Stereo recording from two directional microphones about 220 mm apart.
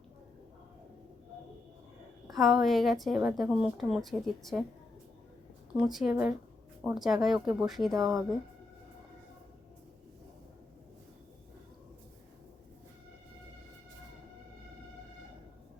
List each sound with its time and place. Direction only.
2.3 s a woman's voice: centre (ahead or behind)
5.7 s a woman's voice: centre (ahead or behind)
7.9 s speech: 15° right (ahead or behind)